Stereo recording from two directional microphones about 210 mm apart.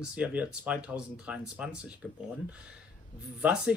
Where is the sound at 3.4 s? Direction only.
5° right (ahead or behind).